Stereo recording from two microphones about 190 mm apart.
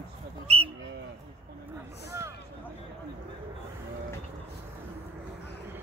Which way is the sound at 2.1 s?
15° right (ahead or behind).